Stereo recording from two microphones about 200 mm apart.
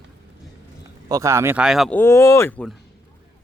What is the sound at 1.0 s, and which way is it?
Speech, 15° right (ahead or behind).